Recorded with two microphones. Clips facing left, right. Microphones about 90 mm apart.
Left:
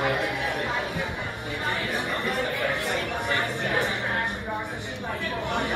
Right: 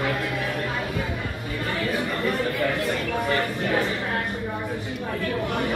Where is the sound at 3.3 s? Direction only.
20° left (ahead or behind).